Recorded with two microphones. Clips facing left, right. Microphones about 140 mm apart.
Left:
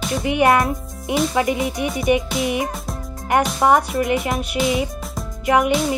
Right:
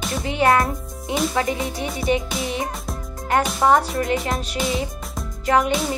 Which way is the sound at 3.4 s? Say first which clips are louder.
Left 1 dB; centre (ahead or behind).